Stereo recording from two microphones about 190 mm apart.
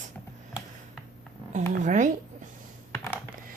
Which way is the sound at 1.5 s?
40° right (ahead or behind).